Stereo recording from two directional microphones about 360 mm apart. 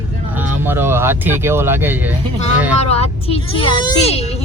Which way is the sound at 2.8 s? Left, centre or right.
Centre.